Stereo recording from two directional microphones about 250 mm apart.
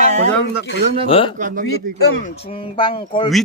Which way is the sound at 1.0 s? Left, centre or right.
Left.